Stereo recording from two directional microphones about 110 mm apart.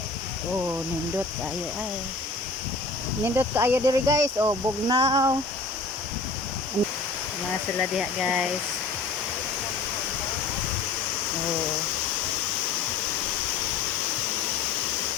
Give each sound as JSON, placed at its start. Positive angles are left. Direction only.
{"t": 3.2, "sound": "speech", "side_deg": -20}
{"t": 5.0, "sound": "a sound", "side_deg": -30}
{"t": 7.9, "sound": "speech", "side_deg": -5}